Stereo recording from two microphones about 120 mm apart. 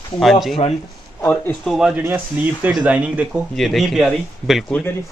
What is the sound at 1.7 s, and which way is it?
Speech, 5° right (ahead or behind).